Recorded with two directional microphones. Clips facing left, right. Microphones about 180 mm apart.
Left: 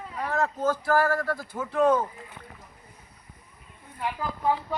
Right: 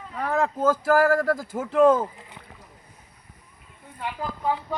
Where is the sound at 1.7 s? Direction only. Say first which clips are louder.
Right 4 dB; 90° right.